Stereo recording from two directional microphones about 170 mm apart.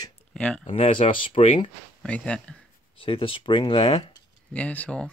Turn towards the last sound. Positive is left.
turn(degrees=10)  # may be behind; listen again after turning